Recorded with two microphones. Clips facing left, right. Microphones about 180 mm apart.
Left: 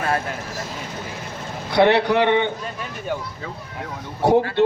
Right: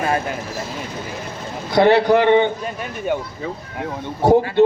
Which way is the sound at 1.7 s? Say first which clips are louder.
Right 2 dB; 65° left (ahead or behind).